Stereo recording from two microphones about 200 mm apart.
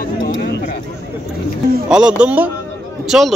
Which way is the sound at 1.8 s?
5° right (ahead or behind).